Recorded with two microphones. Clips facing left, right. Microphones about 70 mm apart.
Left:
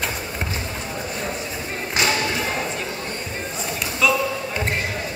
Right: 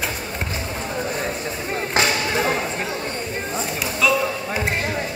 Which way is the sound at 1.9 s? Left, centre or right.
Right.